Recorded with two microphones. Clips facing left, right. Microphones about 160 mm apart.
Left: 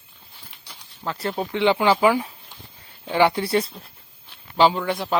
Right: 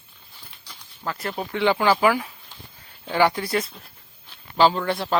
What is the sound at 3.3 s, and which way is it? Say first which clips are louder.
Speech: left 3 dB; 30° left (ahead or behind).